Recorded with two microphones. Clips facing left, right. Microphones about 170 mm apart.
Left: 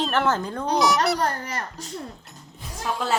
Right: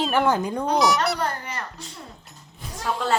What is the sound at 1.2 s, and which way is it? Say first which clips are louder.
Speech: left 2 dB; 40° left (ahead or behind).